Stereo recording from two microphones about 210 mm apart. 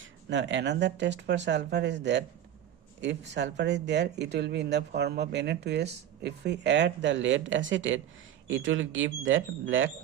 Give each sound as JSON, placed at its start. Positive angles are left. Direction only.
{"t": 0.0, "sound": "speech", "side_deg": -60}